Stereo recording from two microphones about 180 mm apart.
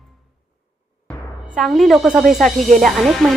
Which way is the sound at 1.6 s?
Centre (ahead or behind).